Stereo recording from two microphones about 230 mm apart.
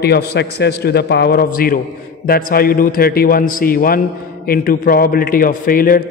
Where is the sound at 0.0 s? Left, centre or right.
Left.